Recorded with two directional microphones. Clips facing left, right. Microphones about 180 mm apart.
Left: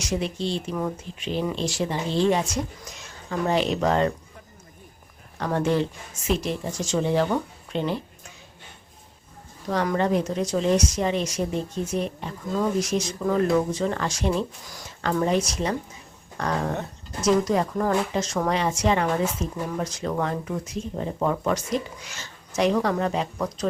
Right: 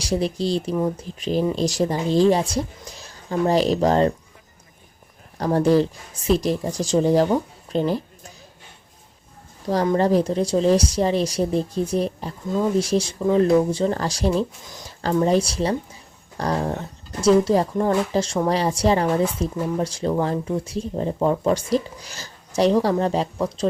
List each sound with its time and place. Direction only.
0.0 s a woman's voice: 35° right (ahead or behind)
5.4 s a woman's voice: 35° right (ahead or behind)
7.7 s a sound: 40° right (ahead or behind)
9.6 s a woman's voice: 30° right (ahead or behind)
14.6 s speech: 20° right (ahead or behind)
15.2 s a woman's voice: 30° right (ahead or behind)